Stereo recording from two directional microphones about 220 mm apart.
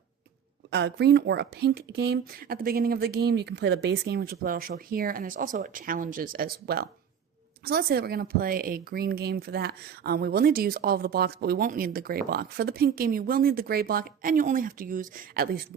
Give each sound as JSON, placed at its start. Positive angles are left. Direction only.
{"t": 0.7, "sound": "a woman's voice", "side_deg": -50}